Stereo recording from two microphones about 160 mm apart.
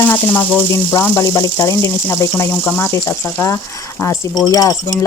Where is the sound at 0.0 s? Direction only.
10° left (ahead or behind).